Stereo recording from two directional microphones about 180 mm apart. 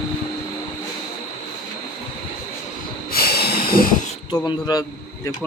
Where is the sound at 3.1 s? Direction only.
60° left (ahead or behind).